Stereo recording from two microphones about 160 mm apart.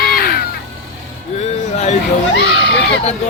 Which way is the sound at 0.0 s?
70° left (ahead or behind).